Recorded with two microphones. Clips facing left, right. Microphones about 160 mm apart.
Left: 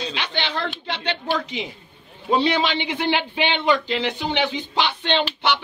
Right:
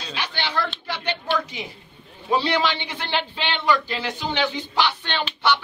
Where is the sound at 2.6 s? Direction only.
15° left (ahead or behind).